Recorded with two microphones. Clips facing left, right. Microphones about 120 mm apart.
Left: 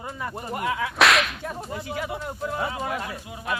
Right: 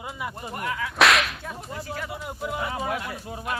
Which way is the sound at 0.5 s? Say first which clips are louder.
Left 5 dB; 20° left (ahead or behind).